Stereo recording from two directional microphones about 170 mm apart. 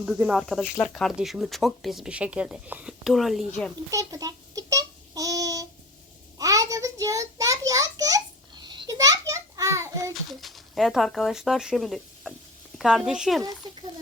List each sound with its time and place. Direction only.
0.0 s speech: 5° right (ahead or behind)
3.9 s a sound: 20° right (ahead or behind)
10.4 s speech: centre (ahead or behind)